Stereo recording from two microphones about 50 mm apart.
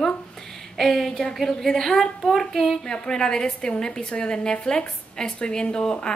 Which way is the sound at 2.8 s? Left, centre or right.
Centre.